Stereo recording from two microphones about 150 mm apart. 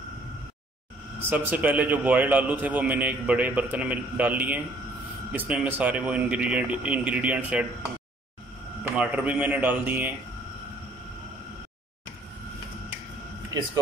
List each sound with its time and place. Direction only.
1.3 s a man's voice: 10° right (ahead or behind)
8.9 s a man's voice: 10° right (ahead or behind)
13.5 s speech: 25° right (ahead or behind)